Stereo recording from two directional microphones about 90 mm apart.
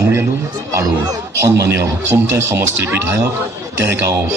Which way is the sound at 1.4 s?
30° right (ahead or behind).